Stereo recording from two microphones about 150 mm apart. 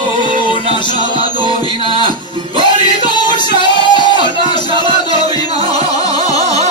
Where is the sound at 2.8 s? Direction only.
30° left (ahead or behind).